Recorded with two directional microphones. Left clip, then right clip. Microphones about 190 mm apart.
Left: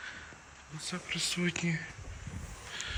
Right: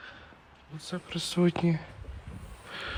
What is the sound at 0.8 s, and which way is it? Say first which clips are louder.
Speech: left 1 dB; 10° right (ahead or behind).